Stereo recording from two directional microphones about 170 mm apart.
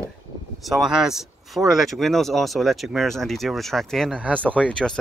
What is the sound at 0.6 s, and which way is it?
Speech, centre (ahead or behind).